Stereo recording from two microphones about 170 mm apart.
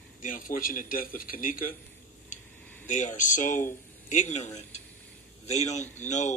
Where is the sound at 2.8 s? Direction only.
45° left (ahead or behind).